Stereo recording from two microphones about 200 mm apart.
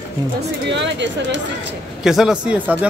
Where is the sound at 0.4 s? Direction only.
60° right (ahead or behind).